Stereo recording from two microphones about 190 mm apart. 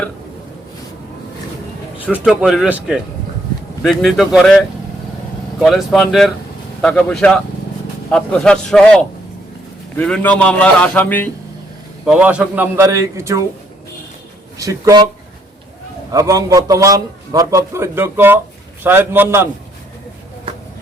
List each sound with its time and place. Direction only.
2.0 s speech: 5° right (ahead or behind)
10.0 s a man's voice: 5° left (ahead or behind)
12.0 s a man's voice: 5° right (ahead or behind)
14.6 s a man's voice: 15° right (ahead or behind)
16.1 s a man's voice: 15° right (ahead or behind)